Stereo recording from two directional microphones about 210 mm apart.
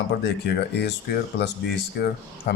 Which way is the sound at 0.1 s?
55° left (ahead or behind).